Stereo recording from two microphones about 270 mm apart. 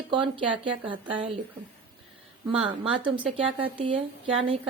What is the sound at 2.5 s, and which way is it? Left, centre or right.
A woman's voice, right.